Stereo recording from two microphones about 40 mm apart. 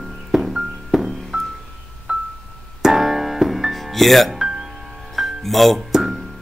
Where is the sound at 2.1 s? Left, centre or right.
Right.